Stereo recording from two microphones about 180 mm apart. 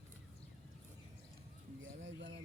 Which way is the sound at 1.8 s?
90° right.